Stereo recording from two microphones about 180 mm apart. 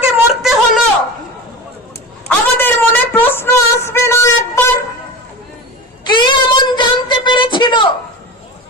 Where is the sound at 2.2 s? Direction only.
10° left (ahead or behind).